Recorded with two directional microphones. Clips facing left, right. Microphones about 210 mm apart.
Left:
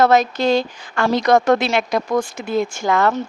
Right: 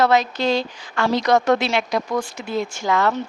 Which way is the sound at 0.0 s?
45° left (ahead or behind).